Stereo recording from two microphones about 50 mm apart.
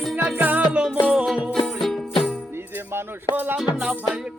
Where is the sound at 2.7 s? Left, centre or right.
Right.